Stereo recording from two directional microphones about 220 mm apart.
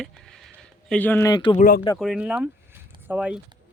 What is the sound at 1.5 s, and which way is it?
Speech, 40° left (ahead or behind).